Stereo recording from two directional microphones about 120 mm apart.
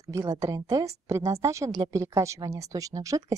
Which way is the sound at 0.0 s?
25° right (ahead or behind).